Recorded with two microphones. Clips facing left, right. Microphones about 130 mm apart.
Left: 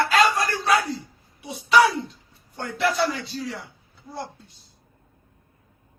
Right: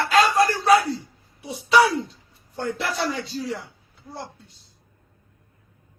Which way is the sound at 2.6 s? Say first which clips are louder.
Left 3 dB; 35° right (ahead or behind).